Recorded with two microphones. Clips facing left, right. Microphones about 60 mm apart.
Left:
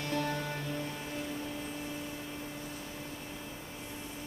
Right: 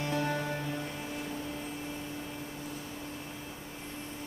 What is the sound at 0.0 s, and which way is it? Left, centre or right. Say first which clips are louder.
Music: right 2 dB; right.